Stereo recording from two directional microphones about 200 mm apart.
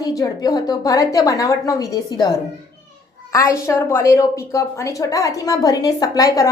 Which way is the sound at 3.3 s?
15° left (ahead or behind).